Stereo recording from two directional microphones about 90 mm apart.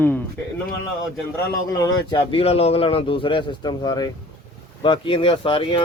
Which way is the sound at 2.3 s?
90° left.